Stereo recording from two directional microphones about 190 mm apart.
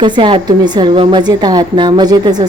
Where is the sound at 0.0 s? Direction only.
25° right (ahead or behind).